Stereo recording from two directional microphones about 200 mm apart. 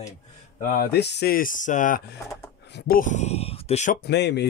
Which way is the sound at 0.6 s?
45° left (ahead or behind).